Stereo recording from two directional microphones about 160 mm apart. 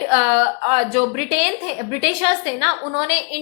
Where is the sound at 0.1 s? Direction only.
35° right (ahead or behind).